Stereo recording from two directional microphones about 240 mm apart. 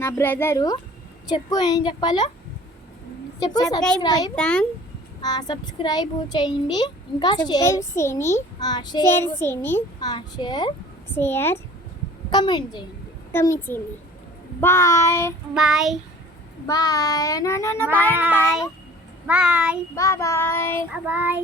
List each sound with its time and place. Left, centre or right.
0.0 s a child's voice: centre
3.4 s a child's voice: centre
4.4 s speech: centre
5.2 s a child's voice: centre
15.5 s speech: centre
16.6 s a child's voice: centre
18.1 s child singing: centre
19.3 s speech: centre
20.0 s a child's voice: centre
20.9 s child singing: centre